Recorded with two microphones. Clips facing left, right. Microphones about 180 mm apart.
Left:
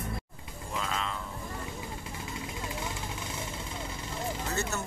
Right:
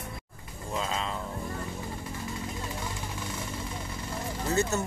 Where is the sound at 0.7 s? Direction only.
25° right (ahead or behind).